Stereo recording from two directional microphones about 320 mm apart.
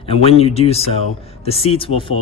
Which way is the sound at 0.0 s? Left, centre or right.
Centre.